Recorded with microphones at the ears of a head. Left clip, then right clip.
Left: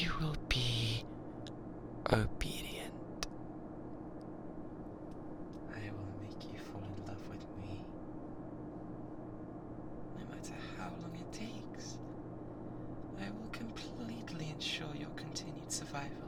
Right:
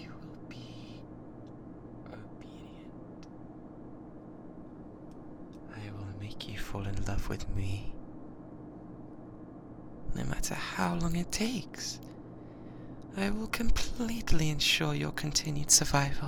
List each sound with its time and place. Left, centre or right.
0.0 s a sound: left
10.2 s speech: right
13.1 s speech: right